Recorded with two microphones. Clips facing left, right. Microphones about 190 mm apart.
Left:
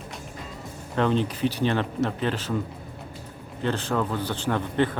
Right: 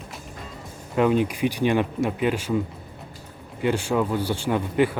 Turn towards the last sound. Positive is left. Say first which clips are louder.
# right 3 dB
turn(degrees=-10)  # may be behind; listen again after turning